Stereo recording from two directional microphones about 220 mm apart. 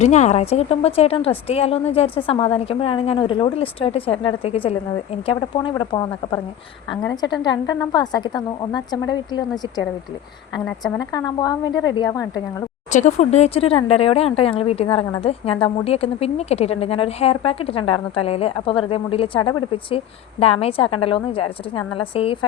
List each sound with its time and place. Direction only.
0.0 s speech: 30° left (ahead or behind)
7.4 s speech: 20° left (ahead or behind)
10.9 s speech: 15° left (ahead or behind)
12.9 s speech: 35° left (ahead or behind)